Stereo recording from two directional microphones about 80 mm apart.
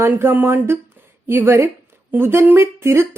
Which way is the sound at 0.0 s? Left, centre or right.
Right.